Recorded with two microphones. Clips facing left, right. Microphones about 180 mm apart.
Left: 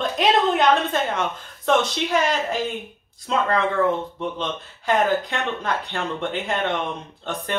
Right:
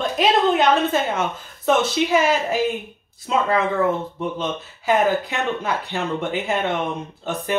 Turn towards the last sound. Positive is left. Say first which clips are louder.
# right 3 dB
turn(degrees=-5)  # may be behind; listen again after turning